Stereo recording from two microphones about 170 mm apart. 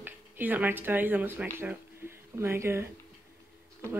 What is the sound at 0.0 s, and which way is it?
Speech, 10° right (ahead or behind).